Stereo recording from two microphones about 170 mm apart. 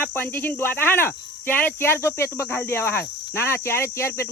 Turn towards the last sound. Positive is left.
turn(degrees=15)  # may be behind; listen again after turning